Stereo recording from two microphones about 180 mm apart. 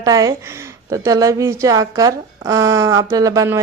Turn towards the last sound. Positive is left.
turn(degrees=-20)  # may be behind; listen again after turning